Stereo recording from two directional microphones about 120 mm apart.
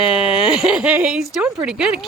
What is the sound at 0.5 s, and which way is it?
Speech, 5° right (ahead or behind).